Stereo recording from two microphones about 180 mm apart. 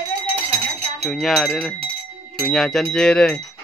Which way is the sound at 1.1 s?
5° left (ahead or behind).